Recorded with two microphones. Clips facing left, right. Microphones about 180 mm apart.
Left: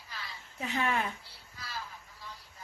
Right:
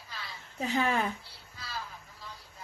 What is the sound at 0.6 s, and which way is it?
Speech, 30° right (ahead or behind).